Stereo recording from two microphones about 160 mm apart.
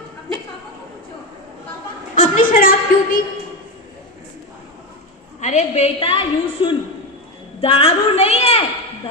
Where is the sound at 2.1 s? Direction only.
60° left (ahead or behind).